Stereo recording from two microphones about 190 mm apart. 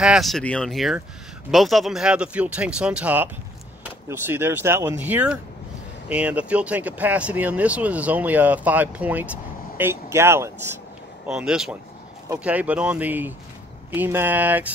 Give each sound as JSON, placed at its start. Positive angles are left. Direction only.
{"t": 0.0, "sound": "speech", "side_deg": 0}
{"t": 11.2, "sound": "speech", "side_deg": -5}